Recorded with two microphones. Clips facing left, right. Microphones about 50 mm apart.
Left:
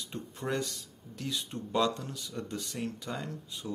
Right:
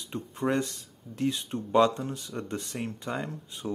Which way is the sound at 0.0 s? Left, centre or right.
Right.